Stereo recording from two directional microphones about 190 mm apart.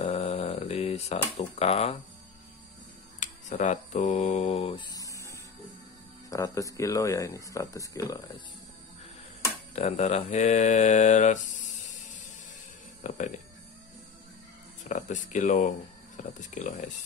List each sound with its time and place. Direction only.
0.0 s a sound: 30° left (ahead or behind)
1.4 s mantra: 35° left (ahead or behind)
3.2 s speech: 40° left (ahead or behind); by 8.2 s 15° left (ahead or behind)
9.8 s mantra: 35° left (ahead or behind)
13.0 s speech: 40° left (ahead or behind)
14.9 s mantra: 40° left (ahead or behind)